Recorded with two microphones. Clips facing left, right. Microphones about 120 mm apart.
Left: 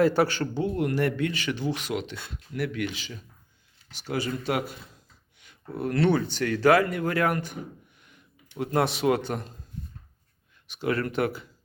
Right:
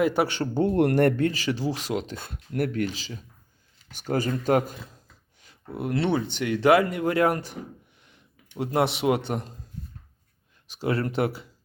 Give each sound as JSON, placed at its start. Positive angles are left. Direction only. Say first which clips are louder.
{"t": 0.0, "sound": "speech", "louder": "left 1 dB", "side_deg": -20}
{"t": 0.5, "sound": "speech", "louder": "right 5 dB", "side_deg": -50}
{"t": 3.9, "sound": "speech", "louder": "right 4 dB", "side_deg": -45}
{"t": 5.7, "sound": "speech", "louder": "left 1 dB", "side_deg": -20}
{"t": 10.7, "sound": "speech", "louder": "right 1 dB", "side_deg": -30}